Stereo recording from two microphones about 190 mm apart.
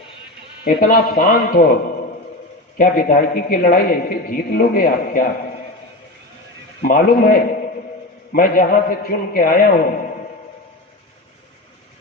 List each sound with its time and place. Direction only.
0.6 s a man's voice: 50° left (ahead or behind)
2.7 s a man's voice: 45° left (ahead or behind)
6.8 s a man's voice: 50° left (ahead or behind)